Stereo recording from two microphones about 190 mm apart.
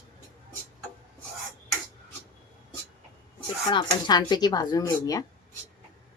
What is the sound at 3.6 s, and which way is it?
Speech, 20° left (ahead or behind).